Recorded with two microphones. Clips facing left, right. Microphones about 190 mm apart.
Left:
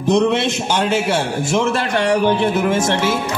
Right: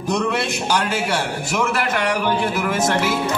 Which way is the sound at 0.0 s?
25° left (ahead or behind).